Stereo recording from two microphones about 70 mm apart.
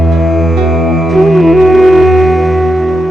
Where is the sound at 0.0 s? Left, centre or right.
Centre.